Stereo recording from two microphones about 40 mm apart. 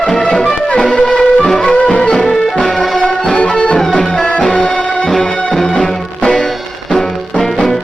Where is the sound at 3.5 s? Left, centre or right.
Left.